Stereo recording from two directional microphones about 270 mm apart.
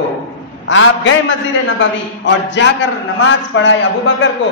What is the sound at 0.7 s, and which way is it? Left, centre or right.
A man's voice, left.